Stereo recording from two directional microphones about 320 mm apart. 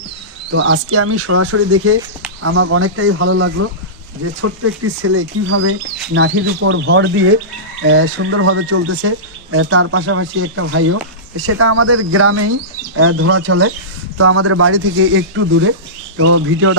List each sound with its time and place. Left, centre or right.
0.5 s speech: right